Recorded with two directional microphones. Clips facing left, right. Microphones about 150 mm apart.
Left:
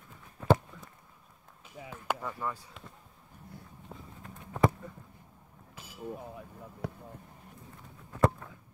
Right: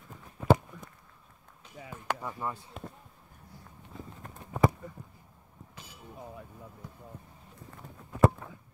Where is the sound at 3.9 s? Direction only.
65° left (ahead or behind).